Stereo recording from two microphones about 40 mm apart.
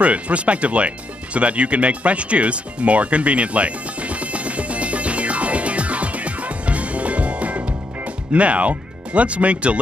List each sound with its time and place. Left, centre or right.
0.0 s music: right